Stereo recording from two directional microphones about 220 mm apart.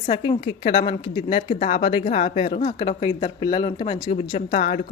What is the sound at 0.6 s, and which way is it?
Speech, 40° left (ahead or behind).